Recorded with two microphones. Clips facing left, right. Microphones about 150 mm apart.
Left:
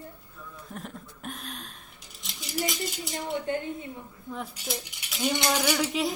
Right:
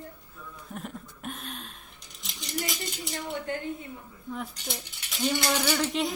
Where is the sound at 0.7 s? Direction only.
Centre (ahead or behind).